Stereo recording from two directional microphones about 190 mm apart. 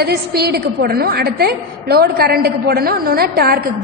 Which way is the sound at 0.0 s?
55° right (ahead or behind).